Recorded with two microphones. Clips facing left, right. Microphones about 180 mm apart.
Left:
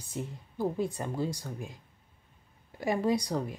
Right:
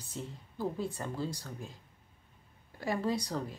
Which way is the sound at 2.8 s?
15° left (ahead or behind).